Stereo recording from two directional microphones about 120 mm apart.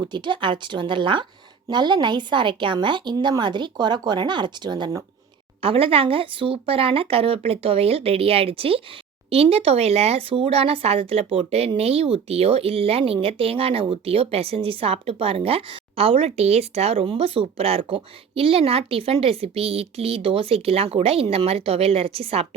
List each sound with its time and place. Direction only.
0.0 s speech: 40° right (ahead or behind)
5.6 s speech: 50° right (ahead or behind)